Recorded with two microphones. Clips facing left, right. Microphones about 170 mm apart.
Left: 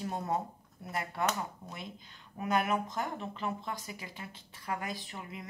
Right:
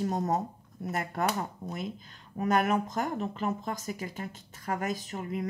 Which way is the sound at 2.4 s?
45° right (ahead or behind).